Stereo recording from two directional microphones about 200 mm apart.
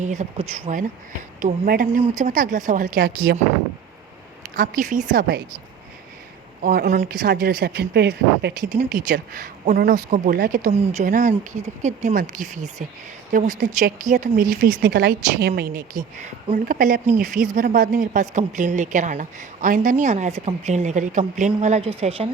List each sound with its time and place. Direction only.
0.0 s a woman's voice: 35° right (ahead or behind)
1.6 s a woman's voice: 45° right (ahead or behind)
4.5 s a woman's voice: 45° right (ahead or behind)
6.6 s a woman's voice: 45° right (ahead or behind)
8.7 s a woman's voice: 40° right (ahead or behind)
10.7 s a woman's voice: 35° right (ahead or behind)